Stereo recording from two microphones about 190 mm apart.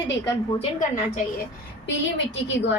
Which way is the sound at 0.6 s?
40° left (ahead or behind).